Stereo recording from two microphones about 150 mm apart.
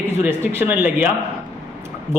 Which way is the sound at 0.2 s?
15° right (ahead or behind).